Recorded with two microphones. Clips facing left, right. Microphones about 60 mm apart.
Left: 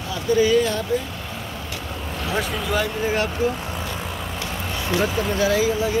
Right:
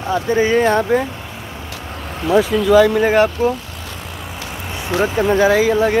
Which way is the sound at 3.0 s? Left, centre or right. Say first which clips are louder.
Right 9 dB; right.